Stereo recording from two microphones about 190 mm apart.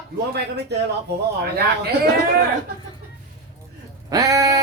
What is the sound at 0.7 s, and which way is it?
Speech, 60° right (ahead or behind).